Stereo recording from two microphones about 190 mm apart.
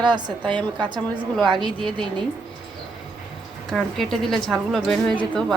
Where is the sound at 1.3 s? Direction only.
Centre (ahead or behind).